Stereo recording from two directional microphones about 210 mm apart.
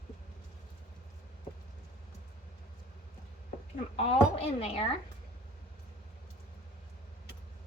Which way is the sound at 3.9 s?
30° left (ahead or behind).